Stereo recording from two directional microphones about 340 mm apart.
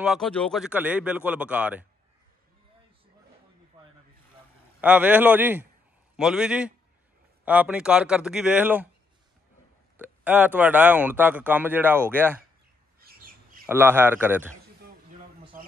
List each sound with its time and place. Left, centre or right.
0.0 s speech: centre
3.8 s rub: centre
4.8 s speech: centre
9.9 s speech: centre
13.0 s squawk: right
13.7 s speech: centre